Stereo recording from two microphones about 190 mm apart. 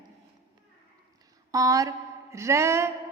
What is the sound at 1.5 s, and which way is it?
A woman's voice, 20° right (ahead or behind).